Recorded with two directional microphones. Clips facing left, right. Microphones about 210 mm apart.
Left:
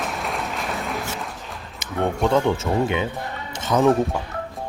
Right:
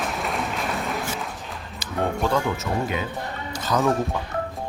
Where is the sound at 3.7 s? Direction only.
25° left (ahead or behind).